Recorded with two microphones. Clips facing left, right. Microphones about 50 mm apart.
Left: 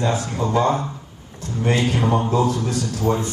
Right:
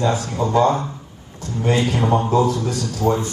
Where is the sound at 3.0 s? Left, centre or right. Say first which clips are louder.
Right 3 dB; right.